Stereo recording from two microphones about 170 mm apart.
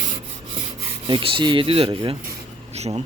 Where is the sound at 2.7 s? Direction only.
40° right (ahead or behind).